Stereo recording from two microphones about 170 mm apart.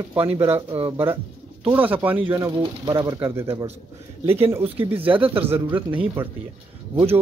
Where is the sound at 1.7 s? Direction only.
10° right (ahead or behind).